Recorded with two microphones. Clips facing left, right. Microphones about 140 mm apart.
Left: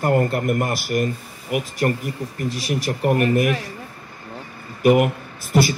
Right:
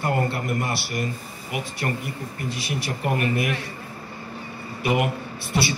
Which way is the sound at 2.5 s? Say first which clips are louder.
Left 6 dB; 40° left (ahead or behind).